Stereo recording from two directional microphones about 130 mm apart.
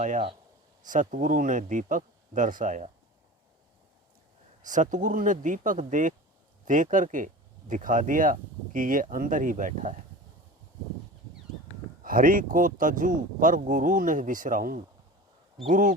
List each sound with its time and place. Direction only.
0.9 s speech: 90° right; by 2.9 s 75° right (ahead or behind)
4.6 s speech: 75° right (ahead or behind)
12.0 s speech: 90° right
15.7 s speech: 90° right